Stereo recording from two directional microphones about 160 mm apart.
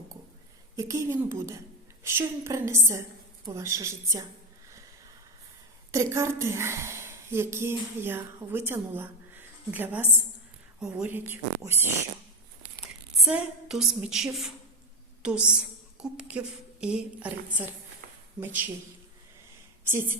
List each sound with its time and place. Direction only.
0.8 s a woman's voice: 20° right (ahead or behind)
5.9 s a woman's voice: 20° right (ahead or behind)
12.8 s a woman's voice: 5° right (ahead or behind)
16.0 s a sound: 5° right (ahead or behind)
16.8 s speech: 5° right (ahead or behind)